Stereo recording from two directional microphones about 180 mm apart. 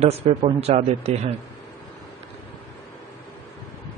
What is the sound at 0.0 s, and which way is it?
Speech, 35° right (ahead or behind).